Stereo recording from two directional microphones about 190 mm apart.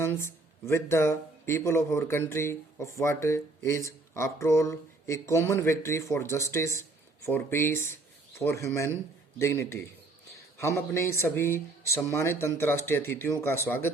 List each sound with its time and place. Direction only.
0.3 s a man's voice: 15° left (ahead or behind)